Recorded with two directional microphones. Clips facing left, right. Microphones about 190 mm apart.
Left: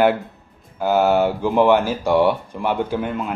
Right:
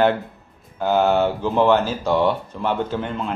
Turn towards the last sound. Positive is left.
turn(degrees=10)  # may be behind; listen again after turning